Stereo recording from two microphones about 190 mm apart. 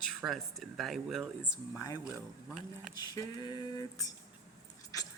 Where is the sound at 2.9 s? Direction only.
20° left (ahead or behind).